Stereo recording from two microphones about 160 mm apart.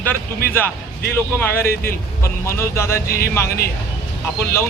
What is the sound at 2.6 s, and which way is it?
Speech, 15° left (ahead or behind).